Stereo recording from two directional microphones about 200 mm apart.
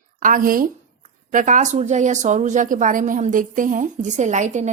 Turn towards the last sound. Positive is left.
turn(degrees=-35)  # may be behind; listen again after turning